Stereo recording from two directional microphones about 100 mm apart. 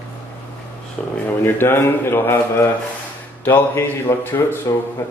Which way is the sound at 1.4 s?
25° left (ahead or behind).